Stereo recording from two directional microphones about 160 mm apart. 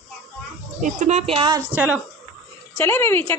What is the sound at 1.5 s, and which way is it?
Speech, 15° right (ahead or behind).